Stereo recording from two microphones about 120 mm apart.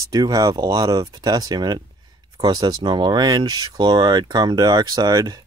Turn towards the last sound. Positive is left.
turn(degrees=-30)  # may be behind; listen again after turning